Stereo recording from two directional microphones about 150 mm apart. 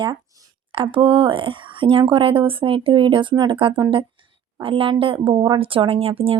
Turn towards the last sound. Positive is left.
turn(degrees=-40)  # may be behind; listen again after turning